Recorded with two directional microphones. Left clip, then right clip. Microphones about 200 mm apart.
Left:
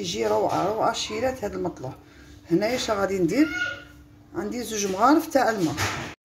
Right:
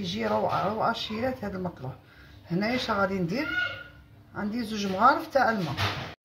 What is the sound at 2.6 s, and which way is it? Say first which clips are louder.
Speech: right 1 dB; 35° left (ahead or behind).